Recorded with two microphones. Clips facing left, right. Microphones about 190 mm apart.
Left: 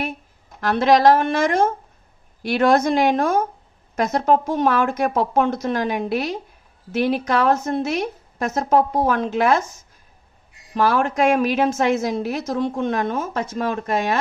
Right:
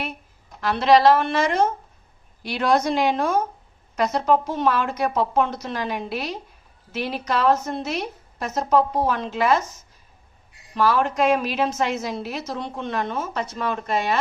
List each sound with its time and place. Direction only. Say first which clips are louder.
0.6 s a woman's voice: left 1 dB; 50° left (ahead or behind)
10.7 s a woman's voice: left 2 dB; 50° left (ahead or behind)